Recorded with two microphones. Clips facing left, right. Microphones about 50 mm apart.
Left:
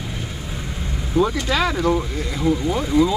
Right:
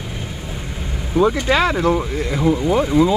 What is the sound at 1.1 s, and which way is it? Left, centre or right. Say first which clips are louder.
Speech: right 4 dB; right.